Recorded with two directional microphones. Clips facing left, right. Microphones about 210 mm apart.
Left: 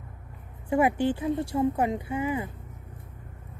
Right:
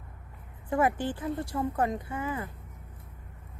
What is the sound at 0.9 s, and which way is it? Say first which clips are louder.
A woman's voice: left 6 dB; 25° left (ahead or behind).